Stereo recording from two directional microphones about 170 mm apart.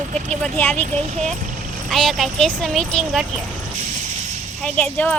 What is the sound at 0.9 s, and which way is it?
Speech, 40° right (ahead or behind).